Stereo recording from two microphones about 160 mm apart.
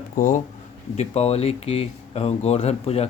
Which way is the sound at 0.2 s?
55° left (ahead or behind).